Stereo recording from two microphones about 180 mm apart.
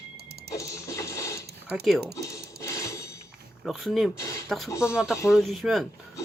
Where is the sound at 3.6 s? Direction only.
Centre (ahead or behind).